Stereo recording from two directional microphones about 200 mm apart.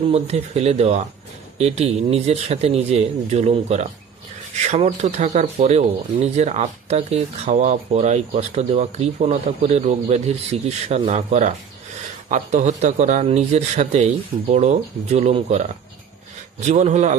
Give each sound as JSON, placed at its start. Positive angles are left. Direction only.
{"t": 0.1, "sound": "speech", "side_deg": -30}